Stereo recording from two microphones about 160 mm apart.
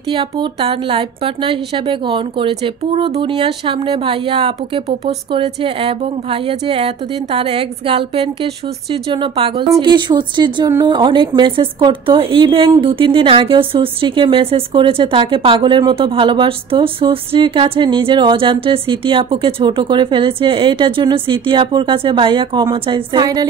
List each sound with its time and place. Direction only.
0.1 s speech: 30° right (ahead or behind)